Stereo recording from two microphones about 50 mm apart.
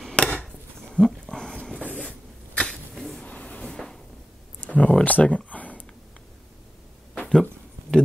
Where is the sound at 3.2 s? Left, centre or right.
Left.